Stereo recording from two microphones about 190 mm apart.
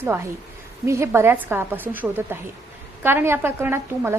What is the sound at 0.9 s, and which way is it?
A woman's voice, 15° right (ahead or behind).